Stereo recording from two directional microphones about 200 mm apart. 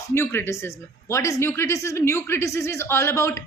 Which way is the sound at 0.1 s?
10° left (ahead or behind).